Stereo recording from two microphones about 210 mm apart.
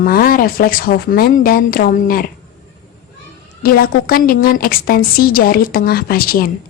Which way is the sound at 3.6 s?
45° left (ahead or behind).